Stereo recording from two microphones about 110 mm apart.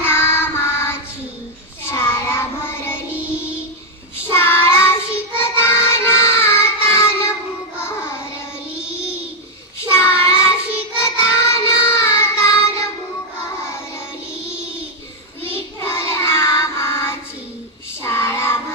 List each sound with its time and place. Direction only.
0.0 s child singing: 20° left (ahead or behind)
4.3 s child singing: 20° left (ahead or behind)
8.7 s child singing: 10° right (ahead or behind)
9.8 s child singing: 25° left (ahead or behind)
15.5 s child singing: 25° left (ahead or behind)